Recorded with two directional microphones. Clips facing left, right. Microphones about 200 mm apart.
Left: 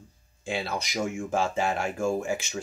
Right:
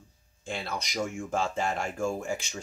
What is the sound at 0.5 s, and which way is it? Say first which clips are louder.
Speech: left 4 dB; 5° left (ahead or behind).